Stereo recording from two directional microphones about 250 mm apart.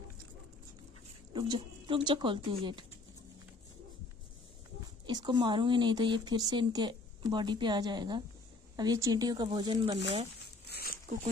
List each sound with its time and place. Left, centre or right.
1.3 s speech: centre
5.0 s speech: centre
10.7 s a sound: left